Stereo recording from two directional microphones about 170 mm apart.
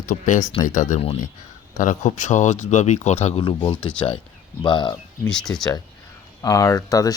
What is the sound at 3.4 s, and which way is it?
Speech, 30° left (ahead or behind).